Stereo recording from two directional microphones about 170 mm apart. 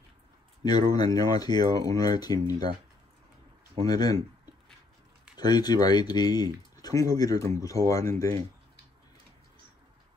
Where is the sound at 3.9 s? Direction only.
20° left (ahead or behind).